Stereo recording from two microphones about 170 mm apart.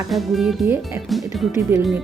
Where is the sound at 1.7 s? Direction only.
10° right (ahead or behind).